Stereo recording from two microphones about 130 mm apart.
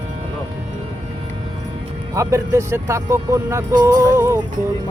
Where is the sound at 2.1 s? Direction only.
25° right (ahead or behind).